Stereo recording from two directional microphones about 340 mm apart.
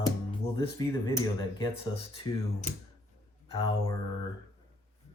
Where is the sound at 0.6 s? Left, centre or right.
Centre.